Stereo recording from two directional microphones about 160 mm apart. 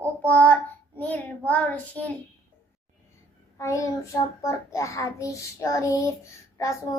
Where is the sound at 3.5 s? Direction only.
20° left (ahead or behind).